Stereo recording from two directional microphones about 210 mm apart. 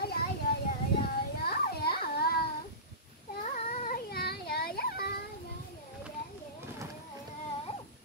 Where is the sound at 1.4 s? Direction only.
45° left (ahead or behind).